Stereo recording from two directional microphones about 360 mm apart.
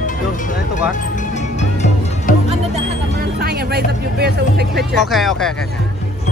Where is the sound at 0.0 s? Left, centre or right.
Left.